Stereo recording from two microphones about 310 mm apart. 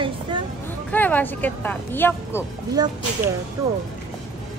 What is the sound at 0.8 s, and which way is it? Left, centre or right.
Speech, centre.